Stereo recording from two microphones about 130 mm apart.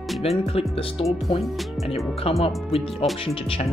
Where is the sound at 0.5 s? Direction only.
45° left (ahead or behind).